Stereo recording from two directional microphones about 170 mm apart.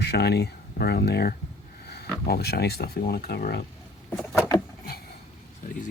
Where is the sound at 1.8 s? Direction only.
70° left (ahead or behind).